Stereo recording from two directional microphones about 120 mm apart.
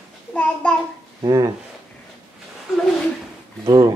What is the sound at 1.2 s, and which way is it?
Speech, 30° right (ahead or behind).